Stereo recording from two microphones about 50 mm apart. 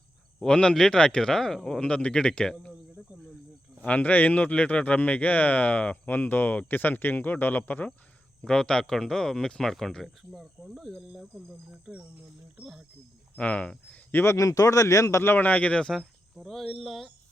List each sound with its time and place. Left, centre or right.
0.4 s speech: centre
1.8 s speech: left
3.8 s speech: left
8.4 s speech: centre
10.3 s cricket: centre
11.1 s speech: centre
12.6 s speech: right
13.3 s speech: left
14.3 s a man's voice: left
15.2 s speech: left
15.4 s speech: left
16.0 s speech: centre